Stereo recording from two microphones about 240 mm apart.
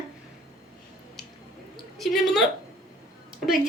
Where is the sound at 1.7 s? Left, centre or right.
Centre.